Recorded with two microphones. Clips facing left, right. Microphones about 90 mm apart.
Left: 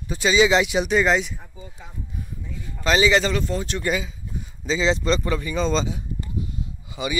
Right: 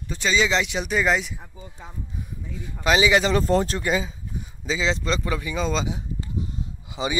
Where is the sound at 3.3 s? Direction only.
40° right (ahead or behind).